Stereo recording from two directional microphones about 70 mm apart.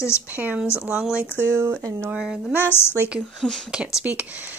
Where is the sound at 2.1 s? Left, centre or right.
Centre.